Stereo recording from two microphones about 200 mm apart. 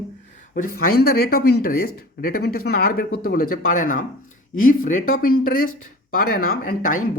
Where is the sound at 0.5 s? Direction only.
45° left (ahead or behind).